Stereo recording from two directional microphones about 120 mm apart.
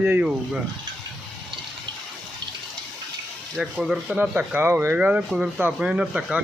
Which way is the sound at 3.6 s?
5° right (ahead or behind).